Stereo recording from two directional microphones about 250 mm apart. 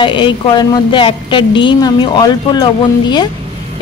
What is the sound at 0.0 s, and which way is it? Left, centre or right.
A woman's voice, centre.